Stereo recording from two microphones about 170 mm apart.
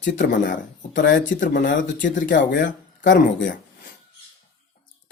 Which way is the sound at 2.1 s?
75° left (ahead or behind).